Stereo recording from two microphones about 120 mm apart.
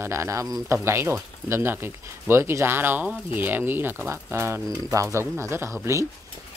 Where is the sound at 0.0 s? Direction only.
25° right (ahead or behind).